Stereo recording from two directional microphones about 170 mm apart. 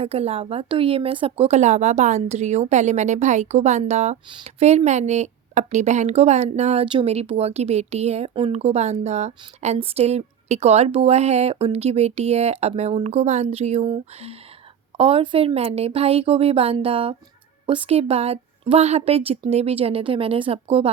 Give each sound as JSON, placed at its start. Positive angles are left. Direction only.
{"t": 0.0, "sound": "a woman's voice", "side_deg": -35}